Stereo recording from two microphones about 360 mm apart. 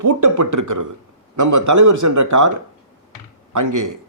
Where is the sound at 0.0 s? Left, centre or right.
Right.